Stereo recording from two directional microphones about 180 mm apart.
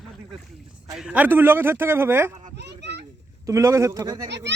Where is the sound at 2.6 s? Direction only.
70° right (ahead or behind).